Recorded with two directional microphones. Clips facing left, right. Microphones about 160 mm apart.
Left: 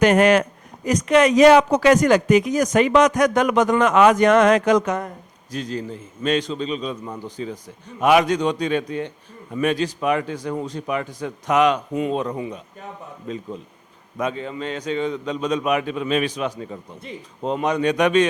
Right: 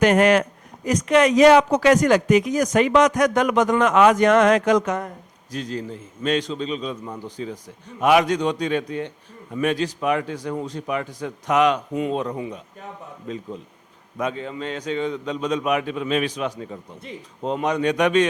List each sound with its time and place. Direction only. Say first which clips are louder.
0.0 s a man's voice: left 1 dB; 10° left (ahead or behind)
16.6 s speech: left 1 dB; 20° left (ahead or behind)
17.0 s a man's voice: left 1 dB; 10° left (ahead or behind)